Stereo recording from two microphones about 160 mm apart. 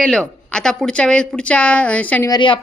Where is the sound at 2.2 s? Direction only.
30° left (ahead or behind).